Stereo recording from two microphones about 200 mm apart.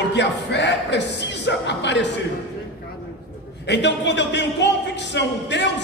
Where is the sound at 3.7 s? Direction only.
60° left (ahead or behind).